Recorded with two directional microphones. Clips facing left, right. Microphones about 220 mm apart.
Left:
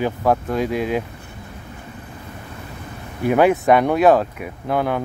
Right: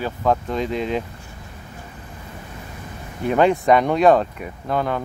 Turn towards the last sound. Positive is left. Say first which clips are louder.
# left 2 dB
turn(degrees=10)  # may be behind; listen again after turning